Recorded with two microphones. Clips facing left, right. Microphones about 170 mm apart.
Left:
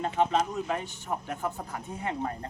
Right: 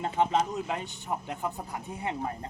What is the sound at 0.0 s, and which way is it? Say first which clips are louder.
Speech: even; 20° right (ahead or behind).